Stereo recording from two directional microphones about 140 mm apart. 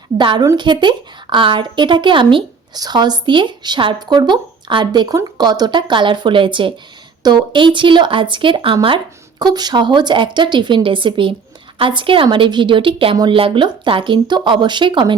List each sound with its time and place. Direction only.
0.2 s a woman's voice: 35° right (ahead or behind)